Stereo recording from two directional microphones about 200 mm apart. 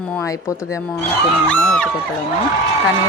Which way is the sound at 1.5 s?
5° left (ahead or behind).